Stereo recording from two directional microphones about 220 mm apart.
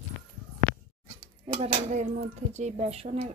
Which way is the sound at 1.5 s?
35° right (ahead or behind).